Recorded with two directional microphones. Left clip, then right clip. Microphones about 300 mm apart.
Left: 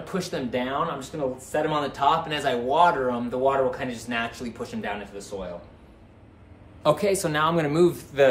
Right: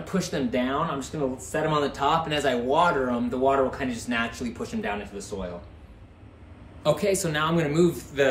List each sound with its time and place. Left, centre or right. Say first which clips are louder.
0.0 s speech: right 1 dB; centre
6.8 s a man's voice: left 2 dB; centre